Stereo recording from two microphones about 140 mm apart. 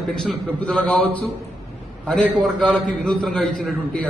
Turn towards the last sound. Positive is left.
turn(degrees=5)  # may be behind; listen again after turning